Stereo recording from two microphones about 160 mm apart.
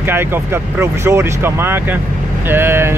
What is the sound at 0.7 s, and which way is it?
Speech, 15° right (ahead or behind).